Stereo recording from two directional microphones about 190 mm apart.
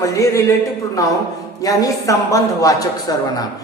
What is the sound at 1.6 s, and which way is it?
A man's voice, 20° left (ahead or behind).